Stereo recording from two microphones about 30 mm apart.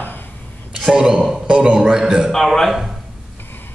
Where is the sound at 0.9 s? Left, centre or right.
Right; by 2.3 s centre.